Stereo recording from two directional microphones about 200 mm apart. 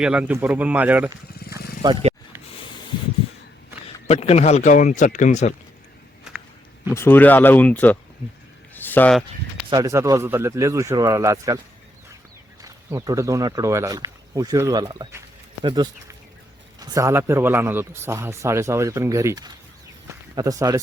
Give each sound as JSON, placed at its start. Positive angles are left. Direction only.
{"t": 0.0, "sound": "a man's voice", "side_deg": -5}
{"t": 1.5, "sound": "vehicle", "side_deg": 50}
{"t": 1.8, "sound": "speech", "side_deg": -25}
{"t": 4.1, "sound": "speech", "side_deg": 30}
{"t": 6.9, "sound": "speech", "side_deg": 10}
{"t": 8.7, "sound": "a sound", "side_deg": 10}
{"t": 9.6, "sound": "a man's voice", "side_deg": -20}
{"t": 12.6, "sound": "a man's voice", "side_deg": -15}